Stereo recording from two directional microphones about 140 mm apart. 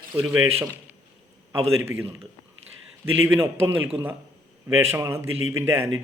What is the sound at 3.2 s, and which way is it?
Speech, 15° right (ahead or behind).